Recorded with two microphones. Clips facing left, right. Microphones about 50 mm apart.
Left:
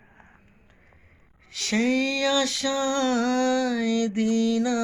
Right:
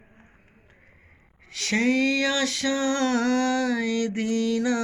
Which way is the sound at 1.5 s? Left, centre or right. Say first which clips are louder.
Right 1 dB; right.